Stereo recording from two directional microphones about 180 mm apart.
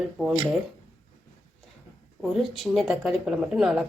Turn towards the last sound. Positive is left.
turn(degrees=-5)  # may be behind; listen again after turning